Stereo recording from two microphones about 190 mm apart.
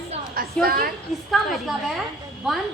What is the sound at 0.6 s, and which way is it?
Speech, 50° right (ahead or behind).